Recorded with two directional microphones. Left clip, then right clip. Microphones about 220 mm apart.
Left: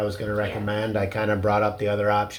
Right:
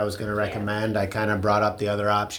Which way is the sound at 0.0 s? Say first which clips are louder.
Even; 40° right (ahead or behind).